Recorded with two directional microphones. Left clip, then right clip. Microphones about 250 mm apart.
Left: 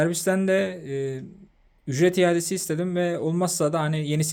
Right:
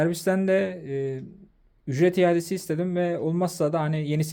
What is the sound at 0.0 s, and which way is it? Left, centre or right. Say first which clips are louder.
Speech: left 1 dB; centre.